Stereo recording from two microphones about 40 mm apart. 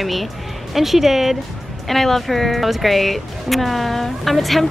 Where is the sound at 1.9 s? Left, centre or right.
Centre.